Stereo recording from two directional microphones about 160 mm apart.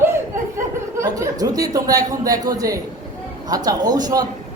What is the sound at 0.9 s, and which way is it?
A man's voice, 20° right (ahead or behind).